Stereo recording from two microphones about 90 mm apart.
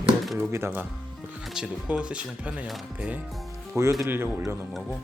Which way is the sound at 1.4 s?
5° right (ahead or behind).